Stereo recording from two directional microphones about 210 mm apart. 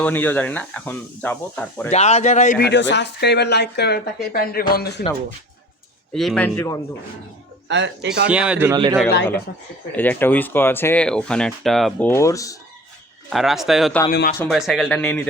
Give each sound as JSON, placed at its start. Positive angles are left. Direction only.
{"t": 0.0, "sound": "speech", "side_deg": 10}
{"t": 1.9, "sound": "speech", "side_deg": 30}
{"t": 2.6, "sound": "speech", "side_deg": 55}
{"t": 6.1, "sound": "speech", "side_deg": 5}
{"t": 7.7, "sound": "speech", "side_deg": -55}
{"t": 8.3, "sound": "a man's voice", "side_deg": -5}
{"t": 9.9, "sound": "speech", "side_deg": 10}
{"t": 13.3, "sound": "speech", "side_deg": 0}
{"t": 14.1, "sound": "speech", "side_deg": 45}
{"t": 14.5, "sound": "speech", "side_deg": 0}